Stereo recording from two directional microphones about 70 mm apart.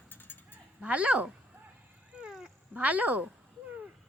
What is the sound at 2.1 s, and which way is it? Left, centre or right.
Dog, centre.